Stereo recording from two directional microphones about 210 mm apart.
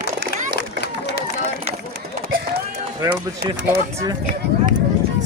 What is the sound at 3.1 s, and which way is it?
Speech, 50° right (ahead or behind).